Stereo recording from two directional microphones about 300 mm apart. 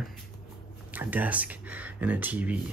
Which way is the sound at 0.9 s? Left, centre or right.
Centre.